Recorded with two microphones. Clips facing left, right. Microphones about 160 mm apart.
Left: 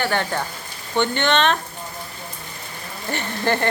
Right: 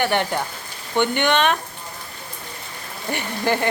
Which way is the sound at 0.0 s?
15° right (ahead or behind).